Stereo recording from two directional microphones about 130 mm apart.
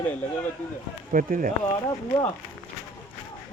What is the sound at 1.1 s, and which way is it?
Speech, 90° right.